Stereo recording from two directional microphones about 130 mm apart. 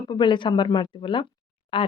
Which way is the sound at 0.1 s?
35° left (ahead or behind).